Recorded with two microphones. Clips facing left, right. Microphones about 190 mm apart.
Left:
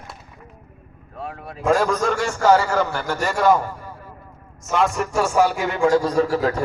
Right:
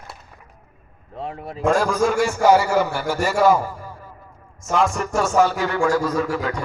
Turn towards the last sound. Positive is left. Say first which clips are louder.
# left 4 dB
turn(degrees=35)  # may be behind; listen again after turning